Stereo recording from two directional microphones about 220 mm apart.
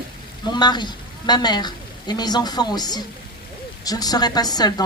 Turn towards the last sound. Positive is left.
turn(degrees=20)  # may be behind; listen again after turning